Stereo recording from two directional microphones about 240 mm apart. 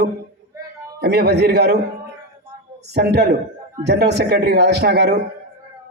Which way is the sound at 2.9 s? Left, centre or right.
Right.